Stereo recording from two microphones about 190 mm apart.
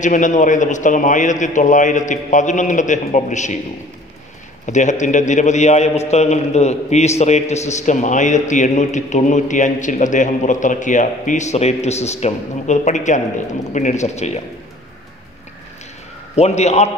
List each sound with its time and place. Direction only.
0.0 s a man's voice: 40° left (ahead or behind)
4.6 s a man's voice: 40° left (ahead or behind)
16.3 s a man's voice: 35° left (ahead or behind)